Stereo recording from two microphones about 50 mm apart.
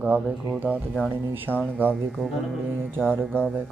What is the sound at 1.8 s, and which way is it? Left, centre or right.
Speech, right.